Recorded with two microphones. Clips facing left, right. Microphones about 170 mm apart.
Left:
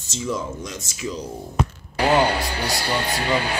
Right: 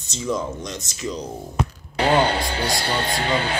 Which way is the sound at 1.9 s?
25° right (ahead or behind).